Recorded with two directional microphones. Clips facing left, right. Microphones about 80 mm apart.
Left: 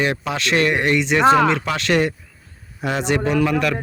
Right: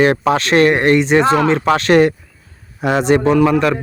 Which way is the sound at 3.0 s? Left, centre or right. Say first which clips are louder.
Right 7 dB; right.